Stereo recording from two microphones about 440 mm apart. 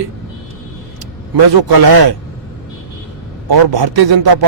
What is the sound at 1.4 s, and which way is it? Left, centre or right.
Speech, right.